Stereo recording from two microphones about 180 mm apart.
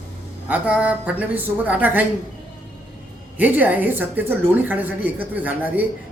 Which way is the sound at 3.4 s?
10° right (ahead or behind).